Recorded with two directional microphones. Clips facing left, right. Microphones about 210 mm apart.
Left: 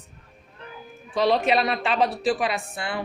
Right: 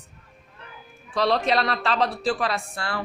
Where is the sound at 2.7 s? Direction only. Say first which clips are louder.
Left 1 dB; 20° left (ahead or behind).